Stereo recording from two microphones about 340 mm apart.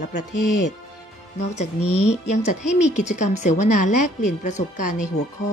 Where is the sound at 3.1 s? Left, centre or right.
Left.